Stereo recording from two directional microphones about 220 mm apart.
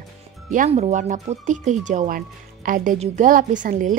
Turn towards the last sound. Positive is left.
turn(degrees=-35)  # may be behind; listen again after turning